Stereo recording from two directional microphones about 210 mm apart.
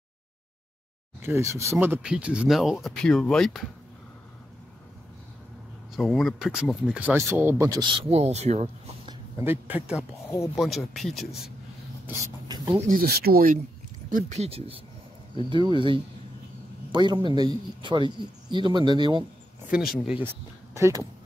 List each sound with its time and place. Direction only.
1.2 s speech: 15° right (ahead or behind); by 3.6 s centre (ahead or behind)
5.9 s speech: centre (ahead or behind); by 9.1 s 30° right (ahead or behind)
9.4 s speech: 10° right (ahead or behind)
12.1 s speech: 15° right (ahead or behind)
12.9 s speech: 45° right (ahead or behind)
14.1 s speech: 30° right (ahead or behind)
20.7 s speech: 15° right (ahead or behind)